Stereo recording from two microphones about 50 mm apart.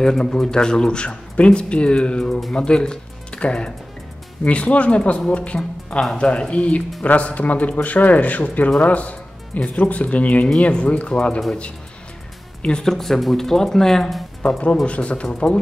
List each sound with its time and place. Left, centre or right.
0.0 s a man's voice: centre
12.8 s speech: centre
14.9 s speech: left
15.2 s speech: centre